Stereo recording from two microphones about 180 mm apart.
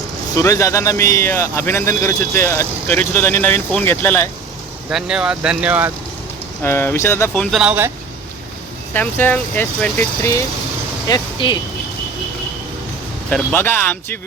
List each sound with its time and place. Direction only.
0.3 s a man's voice: 15° left (ahead or behind)
4.9 s speech: 5° right (ahead or behind)
6.6 s a man's voice: 15° left (ahead or behind)
7.5 s speech: 5° right (ahead or behind)
8.9 s a man's voice: 10° left (ahead or behind)
11.1 s speech: 25° left (ahead or behind)
13.3 s a man's voice: 10° left (ahead or behind)